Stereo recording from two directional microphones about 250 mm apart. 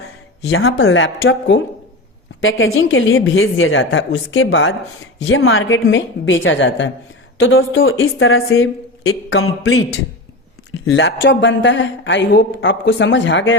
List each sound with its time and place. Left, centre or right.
0.5 s speech: left